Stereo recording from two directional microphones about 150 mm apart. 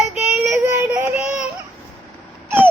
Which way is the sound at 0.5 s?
15° right (ahead or behind).